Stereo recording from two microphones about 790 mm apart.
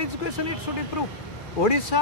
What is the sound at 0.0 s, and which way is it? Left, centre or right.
Speech, left.